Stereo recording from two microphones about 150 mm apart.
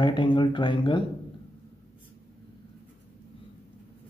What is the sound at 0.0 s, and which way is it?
Speech, 30° left (ahead or behind).